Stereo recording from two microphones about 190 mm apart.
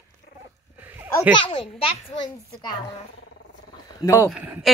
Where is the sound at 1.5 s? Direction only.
25° left (ahead or behind).